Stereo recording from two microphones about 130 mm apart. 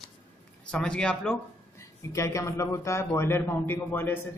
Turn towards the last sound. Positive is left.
turn(degrees=15)  # may be behind; listen again after turning